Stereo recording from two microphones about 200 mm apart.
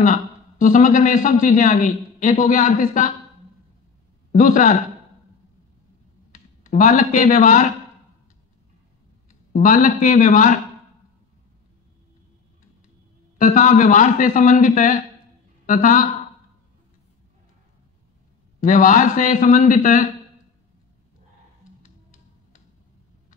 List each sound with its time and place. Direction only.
0.0 s a man's voice: 40° left (ahead or behind)
4.3 s a man's voice: 40° left (ahead or behind)
6.3 s speech: 40° left (ahead or behind)
9.5 s a man's voice: 40° left (ahead or behind)
13.4 s a man's voice: 40° left (ahead or behind)
18.6 s a man's voice: 40° left (ahead or behind)
21.8 s music: 40° left (ahead or behind)